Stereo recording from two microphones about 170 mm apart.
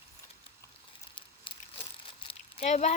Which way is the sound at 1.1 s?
30° left (ahead or behind).